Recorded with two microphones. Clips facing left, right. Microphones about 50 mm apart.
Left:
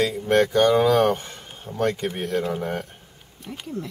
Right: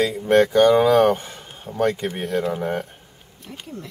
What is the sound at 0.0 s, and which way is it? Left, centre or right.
Speech, centre.